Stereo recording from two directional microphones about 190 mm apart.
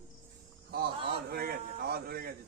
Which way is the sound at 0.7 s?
55° right (ahead or behind).